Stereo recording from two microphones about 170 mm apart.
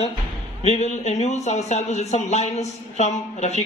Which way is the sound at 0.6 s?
40° left (ahead or behind).